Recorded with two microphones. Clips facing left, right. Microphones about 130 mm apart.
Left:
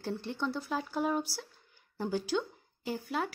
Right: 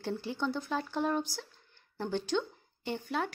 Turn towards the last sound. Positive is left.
turn(degrees=0)  # may be behind; listen again after turning